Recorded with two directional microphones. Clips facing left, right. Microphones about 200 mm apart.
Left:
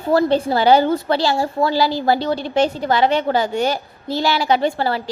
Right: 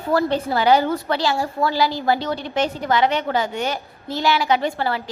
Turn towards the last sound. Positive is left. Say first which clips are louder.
# left 3 dB
turn(degrees=30)  # may be behind; listen again after turning